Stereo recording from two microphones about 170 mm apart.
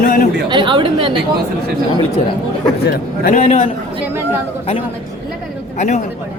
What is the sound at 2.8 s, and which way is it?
Speech, 70° left (ahead or behind).